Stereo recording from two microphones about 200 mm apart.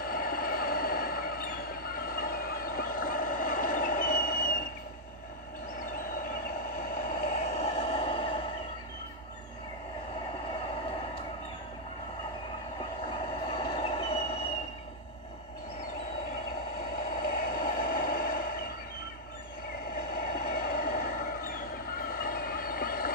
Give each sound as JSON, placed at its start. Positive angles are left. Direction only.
{"t": 0.0, "sound": "vehicle", "side_deg": 45}
{"t": 7.0, "sound": "vehicle", "side_deg": 40}
{"t": 13.5, "sound": "train", "side_deg": 25}
{"t": 17.2, "sound": "vehicle", "side_deg": 45}
{"t": 20.3, "sound": "vehicle", "side_deg": 45}